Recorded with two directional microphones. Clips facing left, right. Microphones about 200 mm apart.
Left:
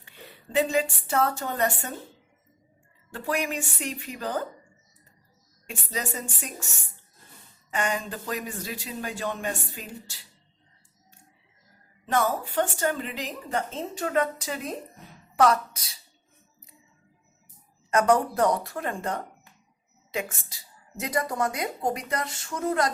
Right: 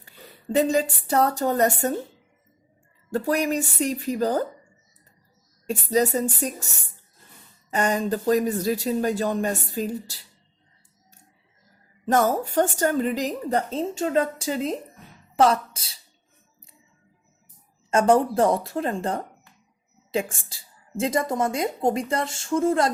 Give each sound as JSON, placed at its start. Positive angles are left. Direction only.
{"t": 0.5, "sound": "a woman's voice", "side_deg": -40}
{"t": 3.1, "sound": "a woman's voice", "side_deg": -40}
{"t": 5.6, "sound": "a woman's voice", "side_deg": -40}
{"t": 7.7, "sound": "a woman's voice", "side_deg": -40}
{"t": 12.0, "sound": "a woman's voice", "side_deg": -45}
{"t": 17.9, "sound": "a woman's voice", "side_deg": -30}